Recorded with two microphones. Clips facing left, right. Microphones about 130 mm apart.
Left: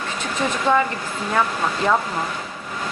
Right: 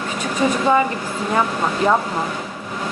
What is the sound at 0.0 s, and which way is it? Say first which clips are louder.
Vehicle: right 4 dB; 10° right (ahead or behind).